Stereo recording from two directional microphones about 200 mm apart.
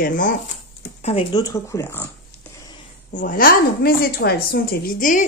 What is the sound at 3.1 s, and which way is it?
Speech, 45° left (ahead or behind).